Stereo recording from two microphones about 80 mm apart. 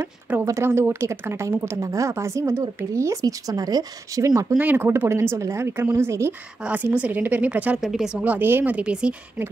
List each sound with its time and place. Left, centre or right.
0.3 s a woman's voice: centre; by 4.6 s right
4.6 s a woman's voice: right
6.6 s a woman's voice: centre
7.8 s speech: centre
8.2 s a woman's voice: right
8.7 s speech: centre